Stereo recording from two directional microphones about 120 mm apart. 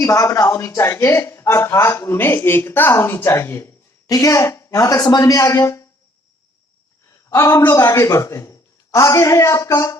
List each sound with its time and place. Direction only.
0.0 s a man's voice: 25° left (ahead or behind)
4.1 s a man's voice: 30° left (ahead or behind)
7.3 s a woman's voice: 25° left (ahead or behind)